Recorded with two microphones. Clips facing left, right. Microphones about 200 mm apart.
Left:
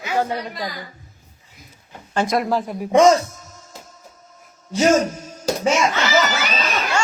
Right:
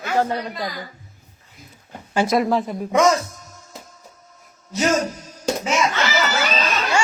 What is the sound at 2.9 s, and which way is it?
Speech, 30° left (ahead or behind).